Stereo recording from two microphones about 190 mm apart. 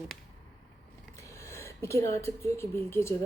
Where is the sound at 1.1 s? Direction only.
15° left (ahead or behind).